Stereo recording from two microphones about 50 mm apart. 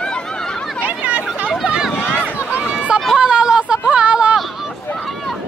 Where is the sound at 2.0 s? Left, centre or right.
Left.